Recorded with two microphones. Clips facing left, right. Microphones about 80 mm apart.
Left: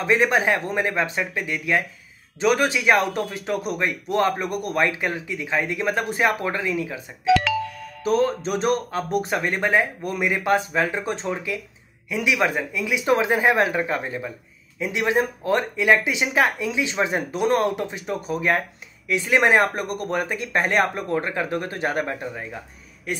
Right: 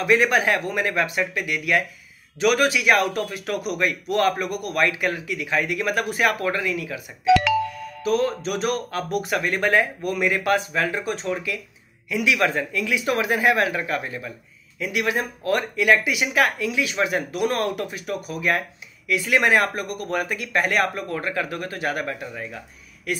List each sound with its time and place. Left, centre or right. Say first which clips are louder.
0.0 s speech: even; left
8.0 s speech: left 1 dB; left